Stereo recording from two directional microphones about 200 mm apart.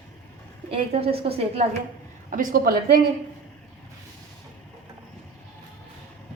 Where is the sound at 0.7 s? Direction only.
30° right (ahead or behind).